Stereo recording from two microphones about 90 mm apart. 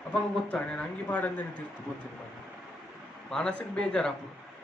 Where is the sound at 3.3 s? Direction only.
10° left (ahead or behind).